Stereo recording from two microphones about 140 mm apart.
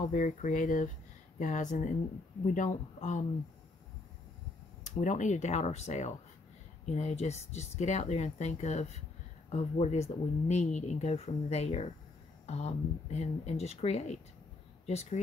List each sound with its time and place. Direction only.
0.1 s speech: 65° left (ahead or behind)
4.8 s speech: 60° left (ahead or behind)